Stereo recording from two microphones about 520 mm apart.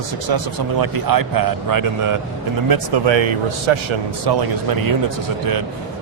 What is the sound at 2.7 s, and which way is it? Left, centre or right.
A man's voice, right.